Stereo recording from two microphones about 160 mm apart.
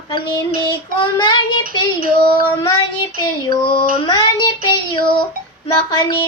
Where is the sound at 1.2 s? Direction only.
30° left (ahead or behind).